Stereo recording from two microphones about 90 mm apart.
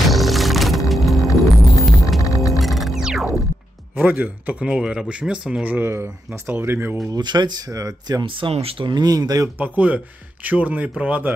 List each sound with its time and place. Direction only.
0.0 s music: centre (ahead or behind)
2.2 s music: 40° left (ahead or behind)
2.6 s music: centre (ahead or behind)
4.0 s speech: 20° right (ahead or behind)
7.1 s speech: 55° right (ahead or behind)
8.2 s speech: 70° right (ahead or behind)
8.9 s speech: 50° right (ahead or behind)
9.6 s speech: 15° right (ahead or behind)